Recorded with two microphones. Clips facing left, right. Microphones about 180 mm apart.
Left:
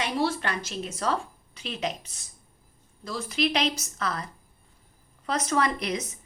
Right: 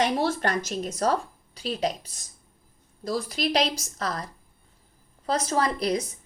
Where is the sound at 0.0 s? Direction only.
45° right (ahead or behind).